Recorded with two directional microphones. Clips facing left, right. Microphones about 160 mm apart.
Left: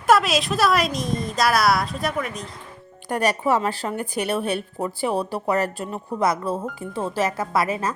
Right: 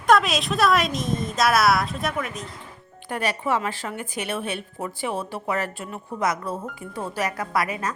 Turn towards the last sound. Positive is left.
turn(degrees=30)  # may be behind; listen again after turning